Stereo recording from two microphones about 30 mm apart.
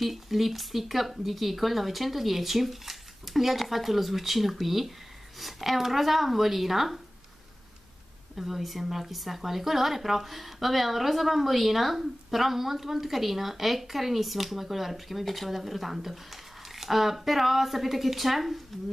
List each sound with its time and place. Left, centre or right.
0.0 s a woman's voice: centre
8.4 s a woman's voice: centre